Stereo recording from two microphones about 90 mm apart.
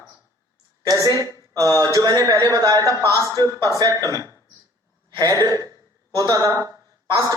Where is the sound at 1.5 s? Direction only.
40° right (ahead or behind).